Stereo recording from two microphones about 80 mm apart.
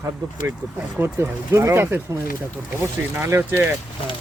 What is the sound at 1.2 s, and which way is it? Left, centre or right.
Speech, right.